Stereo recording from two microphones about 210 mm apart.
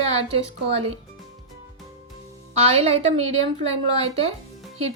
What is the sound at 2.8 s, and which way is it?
A woman's voice, 30° right (ahead or behind).